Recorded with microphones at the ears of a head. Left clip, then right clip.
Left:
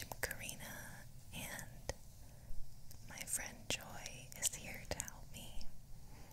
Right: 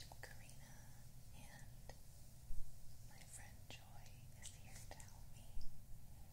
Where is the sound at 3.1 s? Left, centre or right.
Left.